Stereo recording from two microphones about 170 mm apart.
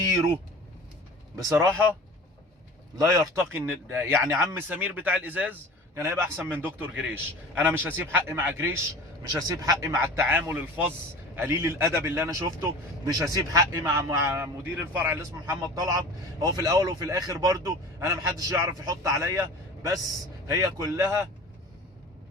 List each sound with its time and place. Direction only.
1.4 s a man's voice: 15° right (ahead or behind)
3.0 s a man's voice: 20° right (ahead or behind)